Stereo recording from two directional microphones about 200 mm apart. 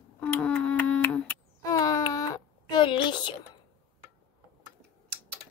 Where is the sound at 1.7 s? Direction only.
15° left (ahead or behind).